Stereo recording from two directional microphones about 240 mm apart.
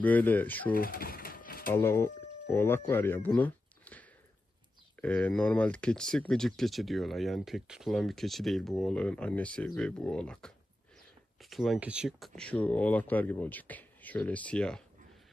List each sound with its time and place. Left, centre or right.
0.0 s speech: centre
0.7 s a sound: left
1.7 s speech: centre
5.0 s speech: centre